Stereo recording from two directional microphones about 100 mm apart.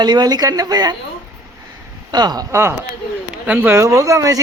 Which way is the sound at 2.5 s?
25° right (ahead or behind).